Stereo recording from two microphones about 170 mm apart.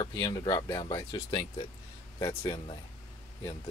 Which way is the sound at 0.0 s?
25° left (ahead or behind).